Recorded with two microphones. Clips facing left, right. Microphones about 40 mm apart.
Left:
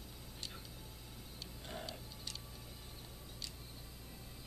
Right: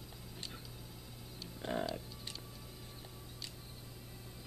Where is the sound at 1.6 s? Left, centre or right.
Right.